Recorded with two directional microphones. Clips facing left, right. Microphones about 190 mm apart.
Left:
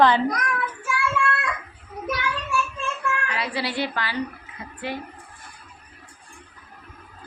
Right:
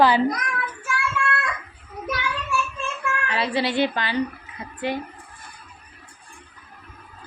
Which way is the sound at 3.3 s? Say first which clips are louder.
Right 4 dB; 25° right (ahead or behind).